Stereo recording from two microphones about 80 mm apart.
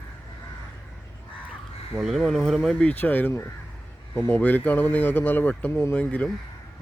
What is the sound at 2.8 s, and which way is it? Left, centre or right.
Speech, centre.